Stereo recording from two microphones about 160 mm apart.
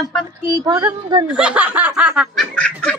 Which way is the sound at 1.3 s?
5° right (ahead or behind).